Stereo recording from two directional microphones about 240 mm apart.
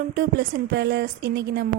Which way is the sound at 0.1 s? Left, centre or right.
Right.